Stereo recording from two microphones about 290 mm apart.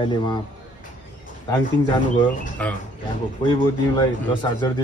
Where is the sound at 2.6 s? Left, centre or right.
Centre.